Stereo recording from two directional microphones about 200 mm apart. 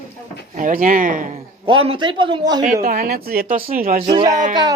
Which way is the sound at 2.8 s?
50° right (ahead or behind).